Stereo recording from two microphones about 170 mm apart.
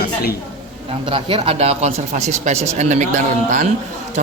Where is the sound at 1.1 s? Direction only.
35° right (ahead or behind).